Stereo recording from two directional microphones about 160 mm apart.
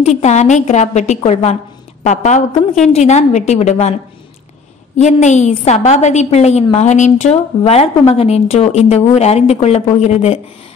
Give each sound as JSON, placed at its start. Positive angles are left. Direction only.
{"t": 0.2, "sound": "a woman's voice", "side_deg": 45}
{"t": 4.9, "sound": "a woman's voice", "side_deg": 45}